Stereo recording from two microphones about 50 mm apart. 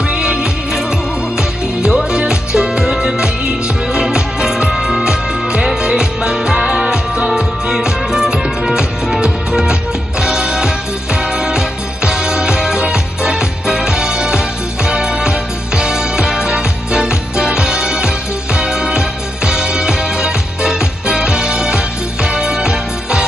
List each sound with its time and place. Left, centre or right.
0.1 s music: centre